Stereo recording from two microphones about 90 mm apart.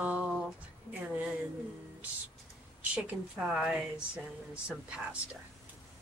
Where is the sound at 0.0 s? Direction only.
15° right (ahead or behind).